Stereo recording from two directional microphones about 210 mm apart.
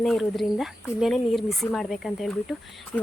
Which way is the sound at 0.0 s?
Centre (ahead or behind).